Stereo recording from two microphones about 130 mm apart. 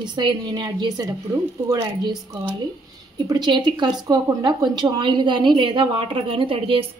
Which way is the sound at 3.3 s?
35° right (ahead or behind).